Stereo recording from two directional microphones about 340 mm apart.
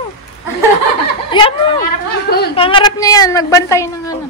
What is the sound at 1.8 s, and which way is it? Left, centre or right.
Speech, left.